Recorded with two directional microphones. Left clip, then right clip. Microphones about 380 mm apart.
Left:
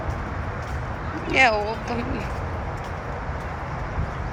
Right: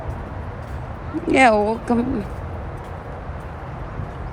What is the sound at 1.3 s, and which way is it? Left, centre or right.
Speech, centre.